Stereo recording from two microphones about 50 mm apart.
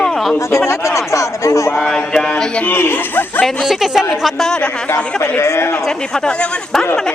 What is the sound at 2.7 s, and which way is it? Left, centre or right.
Speech, left.